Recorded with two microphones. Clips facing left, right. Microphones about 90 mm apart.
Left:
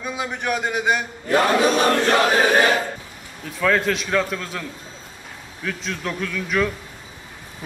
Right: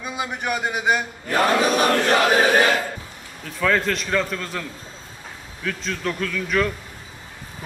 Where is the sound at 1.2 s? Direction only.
35° left (ahead or behind).